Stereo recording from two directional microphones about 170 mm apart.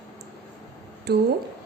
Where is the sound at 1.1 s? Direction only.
75° right (ahead or behind).